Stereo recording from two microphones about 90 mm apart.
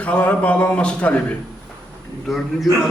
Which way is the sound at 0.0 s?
15° left (ahead or behind).